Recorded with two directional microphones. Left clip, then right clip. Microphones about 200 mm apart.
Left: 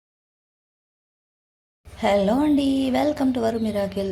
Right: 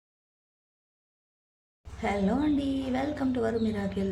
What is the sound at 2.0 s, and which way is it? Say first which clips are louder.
A woman's voice: left 9 dB; 20° left (ahead or behind).